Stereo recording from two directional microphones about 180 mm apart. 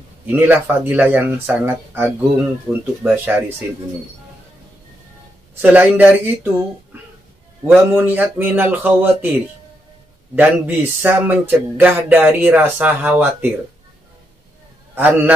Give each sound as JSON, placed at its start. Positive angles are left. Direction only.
{"t": 0.3, "sound": "speech", "side_deg": -10}
{"t": 5.6, "sound": "speech", "side_deg": -10}
{"t": 7.6, "sound": "speech", "side_deg": -10}
{"t": 15.0, "sound": "speech", "side_deg": -10}